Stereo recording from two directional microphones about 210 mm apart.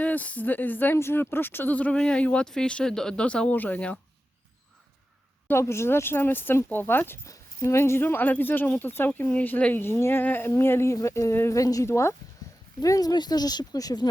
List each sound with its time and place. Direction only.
0.0 s speech: 5° left (ahead or behind)
5.5 s speech: 10° left (ahead or behind)
12.4 s a sound: 15° left (ahead or behind)
12.8 s speech: 15° left (ahead or behind)